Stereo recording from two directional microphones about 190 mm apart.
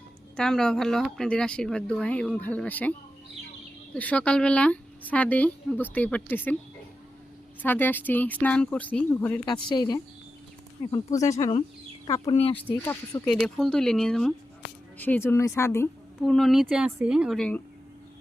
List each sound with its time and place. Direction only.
0.3 s speech: 5° left (ahead or behind)
3.9 s a woman's voice: 5° left (ahead or behind)
7.6 s a woman's voice: 10° left (ahead or behind)
9.5 s a woman's voice: 25° left (ahead or behind)
12.4 s speech: 30° left (ahead or behind)
12.6 s a woman's voice: 10° left (ahead or behind)
16.2 s speech: centre (ahead or behind)